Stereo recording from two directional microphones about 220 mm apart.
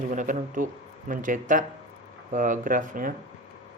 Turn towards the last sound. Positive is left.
turn(degrees=-40)  # may be behind; listen again after turning